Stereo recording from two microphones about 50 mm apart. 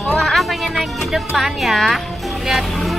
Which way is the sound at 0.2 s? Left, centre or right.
Centre.